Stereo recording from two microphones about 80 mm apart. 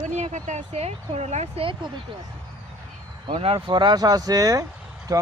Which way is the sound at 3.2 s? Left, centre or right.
Right.